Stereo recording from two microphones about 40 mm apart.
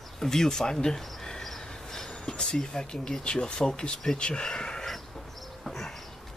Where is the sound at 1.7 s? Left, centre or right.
Centre.